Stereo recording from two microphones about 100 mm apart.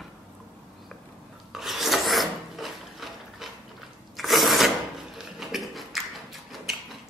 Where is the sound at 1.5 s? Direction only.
Centre (ahead or behind).